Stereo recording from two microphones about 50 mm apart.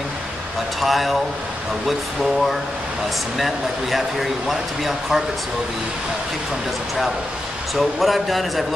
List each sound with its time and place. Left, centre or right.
0.7 s speech: centre
3.3 s speech: centre
7.7 s speech: centre